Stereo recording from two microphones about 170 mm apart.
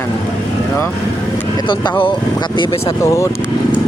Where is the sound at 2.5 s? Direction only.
30° left (ahead or behind).